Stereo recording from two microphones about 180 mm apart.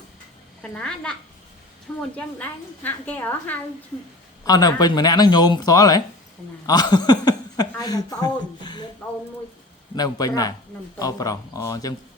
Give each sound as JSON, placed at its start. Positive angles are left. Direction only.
{"t": 0.6, "sound": "a child's voice", "side_deg": 5}
{"t": 2.1, "sound": "a woman's voice", "side_deg": 10}
{"t": 4.4, "sound": "speech", "side_deg": 20}
{"t": 6.7, "sound": "a sound", "side_deg": 25}
{"t": 7.8, "sound": "speech", "side_deg": 20}
{"t": 9.9, "sound": "speech", "side_deg": 20}